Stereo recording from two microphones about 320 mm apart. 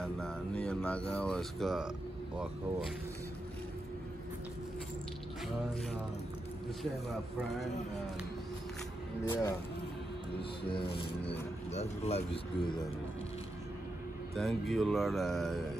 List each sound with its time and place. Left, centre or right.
0.0 s speech: centre
9.3 s speech: centre
10.7 s speech: centre
14.3 s speech: centre